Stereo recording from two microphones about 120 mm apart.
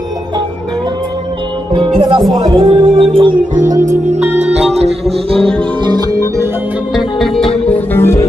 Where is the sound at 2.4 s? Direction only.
35° right (ahead or behind).